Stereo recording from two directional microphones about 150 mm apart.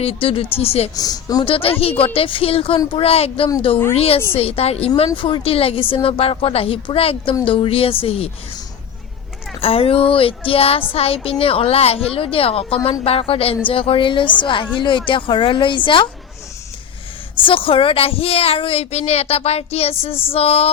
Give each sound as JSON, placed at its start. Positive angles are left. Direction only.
{"t": 0.0, "sound": "a child's voice", "side_deg": 40}
{"t": 0.9, "sound": "speech", "side_deg": 25}
{"t": 1.5, "sound": "a child's voice", "side_deg": 40}
{"t": 9.6, "sound": "a child's voice", "side_deg": 40}
{"t": 17.4, "sound": "a child's voice", "side_deg": 35}